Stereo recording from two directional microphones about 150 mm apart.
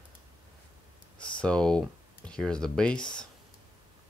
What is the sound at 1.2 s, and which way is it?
Speech, 5° left (ahead or behind).